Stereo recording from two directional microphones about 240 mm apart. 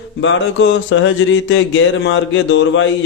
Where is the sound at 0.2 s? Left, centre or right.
Left.